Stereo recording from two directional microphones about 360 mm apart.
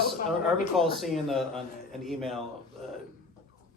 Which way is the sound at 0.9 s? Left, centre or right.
Centre.